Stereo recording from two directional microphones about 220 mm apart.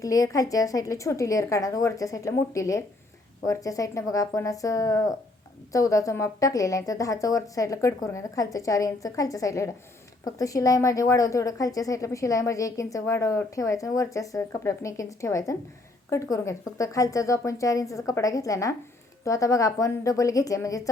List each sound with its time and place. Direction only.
0.0 s a woman's voice: 15° left (ahead or behind)